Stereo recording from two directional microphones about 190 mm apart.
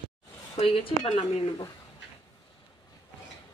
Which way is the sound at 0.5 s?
30° left (ahead or behind).